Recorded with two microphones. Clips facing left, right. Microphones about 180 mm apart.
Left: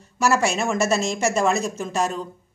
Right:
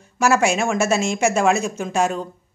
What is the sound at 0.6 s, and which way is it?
A woman's voice, centre (ahead or behind).